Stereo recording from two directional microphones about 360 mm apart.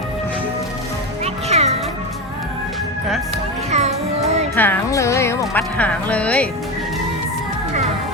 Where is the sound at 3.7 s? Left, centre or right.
Centre.